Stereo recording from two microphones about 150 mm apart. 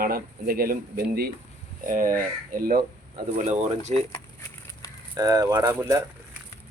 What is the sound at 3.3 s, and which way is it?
Speech, 50° right (ahead or behind).